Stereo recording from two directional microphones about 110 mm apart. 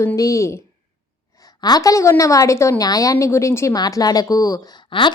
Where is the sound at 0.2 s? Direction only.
30° left (ahead or behind).